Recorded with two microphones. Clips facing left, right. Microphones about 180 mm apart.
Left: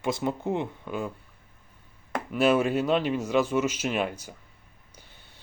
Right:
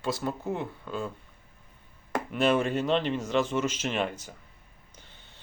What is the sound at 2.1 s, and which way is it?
Speech, 5° left (ahead or behind).